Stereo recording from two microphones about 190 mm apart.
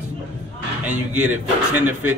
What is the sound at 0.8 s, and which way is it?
Speech, 5° right (ahead or behind).